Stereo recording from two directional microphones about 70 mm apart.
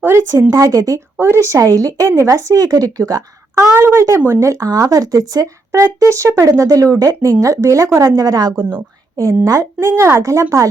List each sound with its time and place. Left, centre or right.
0.0 s speech: right
0.5 s speech: right
1.2 s speech: right
1.5 s speech: right
3.6 s speech: right
5.8 s a woman's voice: right
9.1 s a woman's voice: right